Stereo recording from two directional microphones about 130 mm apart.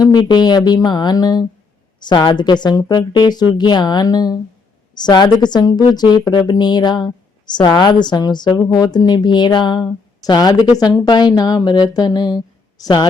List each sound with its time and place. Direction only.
0.0 s a woman's voice: 35° left (ahead or behind)